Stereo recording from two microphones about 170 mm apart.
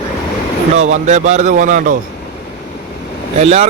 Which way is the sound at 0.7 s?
45° right (ahead or behind).